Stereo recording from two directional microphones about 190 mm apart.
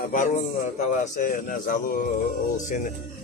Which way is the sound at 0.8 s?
40° left (ahead or behind).